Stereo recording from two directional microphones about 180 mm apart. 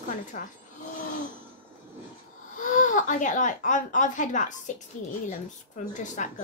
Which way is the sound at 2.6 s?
45° left (ahead or behind).